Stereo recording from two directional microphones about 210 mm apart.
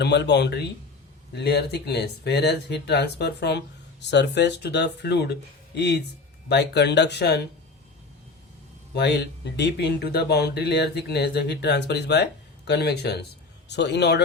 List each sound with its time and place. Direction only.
0.0 s speech: 55° left (ahead or behind)
9.0 s speech: 55° left (ahead or behind)